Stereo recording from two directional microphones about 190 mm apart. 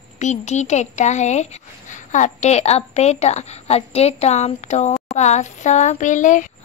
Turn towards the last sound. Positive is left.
turn(degrees=40)  # may be behind; listen again after turning